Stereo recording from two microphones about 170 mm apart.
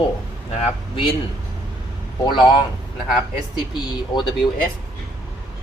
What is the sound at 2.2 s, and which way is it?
Speech, 25° left (ahead or behind).